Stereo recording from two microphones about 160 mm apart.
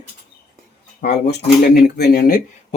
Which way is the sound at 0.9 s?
85° left.